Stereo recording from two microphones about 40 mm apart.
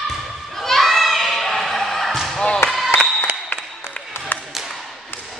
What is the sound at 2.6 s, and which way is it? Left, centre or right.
Speech, left.